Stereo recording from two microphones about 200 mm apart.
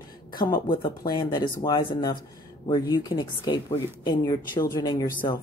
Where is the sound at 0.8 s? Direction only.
25° left (ahead or behind).